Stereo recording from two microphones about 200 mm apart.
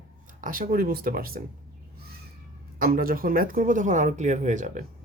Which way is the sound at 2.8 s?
45° right (ahead or behind).